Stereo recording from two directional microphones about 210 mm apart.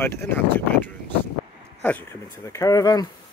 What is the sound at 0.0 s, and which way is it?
Speech, 10° left (ahead or behind).